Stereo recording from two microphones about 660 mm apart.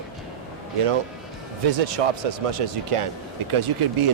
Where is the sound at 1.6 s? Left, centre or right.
Right.